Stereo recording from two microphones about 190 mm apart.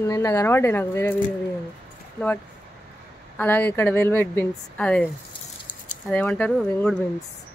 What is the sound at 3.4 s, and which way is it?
A woman's voice, 10° left (ahead or behind).